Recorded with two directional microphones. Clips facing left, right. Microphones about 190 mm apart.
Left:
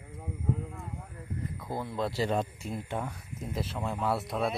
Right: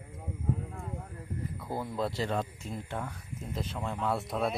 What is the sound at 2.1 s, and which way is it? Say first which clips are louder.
Speech: left 3 dB; 15° left (ahead or behind).